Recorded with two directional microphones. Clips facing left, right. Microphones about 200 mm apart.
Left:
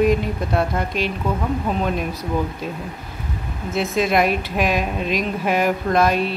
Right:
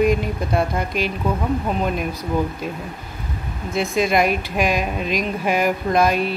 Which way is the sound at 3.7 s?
5° left (ahead or behind).